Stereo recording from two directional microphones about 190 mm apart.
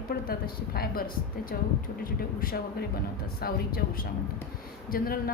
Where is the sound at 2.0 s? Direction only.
50° left (ahead or behind).